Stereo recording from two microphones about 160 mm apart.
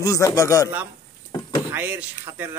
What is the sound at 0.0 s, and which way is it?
Speech, 20° left (ahead or behind).